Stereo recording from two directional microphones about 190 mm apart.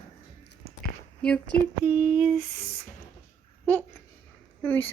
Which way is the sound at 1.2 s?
5° left (ahead or behind).